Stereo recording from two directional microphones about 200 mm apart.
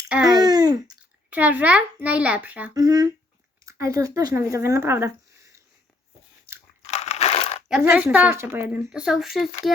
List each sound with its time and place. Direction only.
0.3 s babbling: 20° right (ahead or behind)
1.3 s speech: 10° right (ahead or behind)
2.7 s speech: 20° right (ahead or behind)
6.8 s crushing: 35° left (ahead or behind)
7.8 s speech: 10° right (ahead or behind)